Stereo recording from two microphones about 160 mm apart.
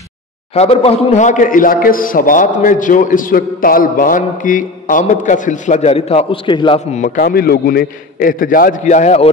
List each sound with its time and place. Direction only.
0.6 s a man's voice: 40° left (ahead or behind)
6.9 s a man's voice: 50° left (ahead or behind)